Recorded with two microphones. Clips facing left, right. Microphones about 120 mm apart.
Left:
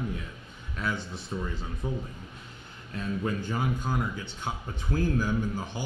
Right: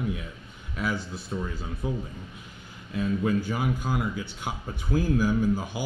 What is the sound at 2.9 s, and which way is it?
A man's voice, 10° right (ahead or behind).